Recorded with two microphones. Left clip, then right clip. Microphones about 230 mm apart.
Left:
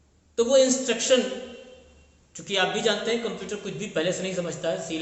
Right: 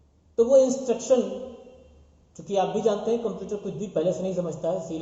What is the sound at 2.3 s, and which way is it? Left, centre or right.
Speech, left.